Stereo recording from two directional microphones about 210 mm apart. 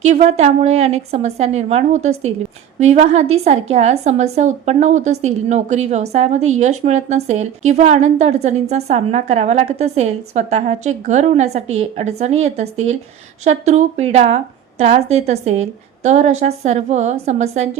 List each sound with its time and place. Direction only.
0.0 s a woman's voice: 35° right (ahead or behind)